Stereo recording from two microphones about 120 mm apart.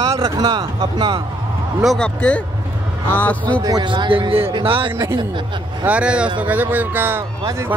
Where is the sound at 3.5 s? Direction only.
35° right (ahead or behind).